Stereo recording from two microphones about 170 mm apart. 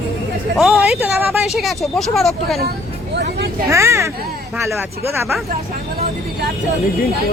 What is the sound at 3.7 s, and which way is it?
Speech, 15° right (ahead or behind).